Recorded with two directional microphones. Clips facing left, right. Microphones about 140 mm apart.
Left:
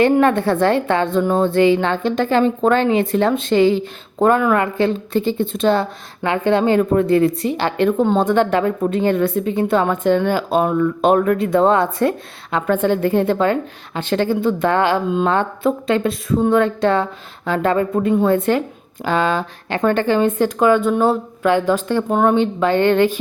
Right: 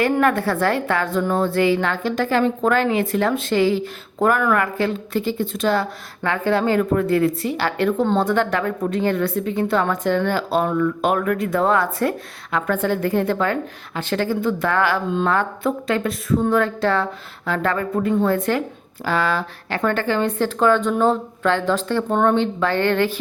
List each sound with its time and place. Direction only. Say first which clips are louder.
0.0 s a woman's voice: left 4 dB; 25° left (ahead or behind)